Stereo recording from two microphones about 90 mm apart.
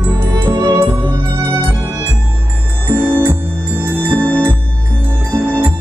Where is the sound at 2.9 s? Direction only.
20° right (ahead or behind).